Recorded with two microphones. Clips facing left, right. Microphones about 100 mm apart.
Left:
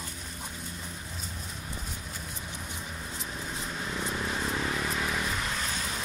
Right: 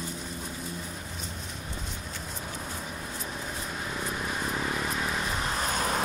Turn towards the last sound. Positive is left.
turn(degrees=-50)  # may be behind; listen again after turning